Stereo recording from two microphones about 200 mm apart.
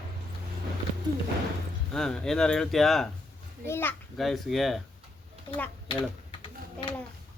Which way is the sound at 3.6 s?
10° left (ahead or behind).